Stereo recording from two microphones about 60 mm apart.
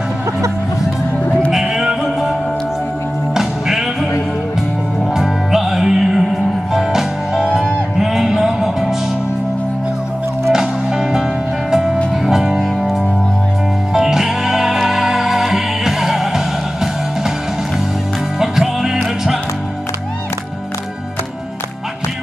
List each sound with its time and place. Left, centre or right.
1.5 s music: centre
3.3 s music: centre
5.1 s music: centre
10.5 s music: centre
18.4 s music: centre